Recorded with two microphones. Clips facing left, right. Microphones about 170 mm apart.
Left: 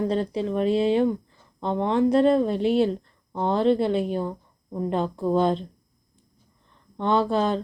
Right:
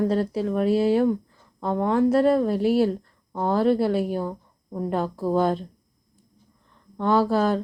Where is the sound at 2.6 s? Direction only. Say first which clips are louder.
Right 1 dB; 20° left (ahead or behind).